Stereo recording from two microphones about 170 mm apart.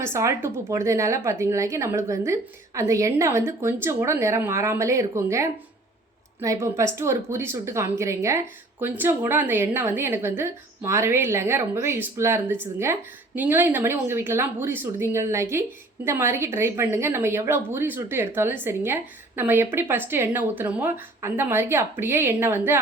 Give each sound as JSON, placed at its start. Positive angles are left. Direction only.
{"t": 0.0, "sound": "a woman's voice", "side_deg": -15}